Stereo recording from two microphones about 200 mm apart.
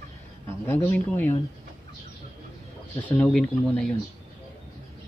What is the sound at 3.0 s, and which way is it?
Speech, 5° left (ahead or behind).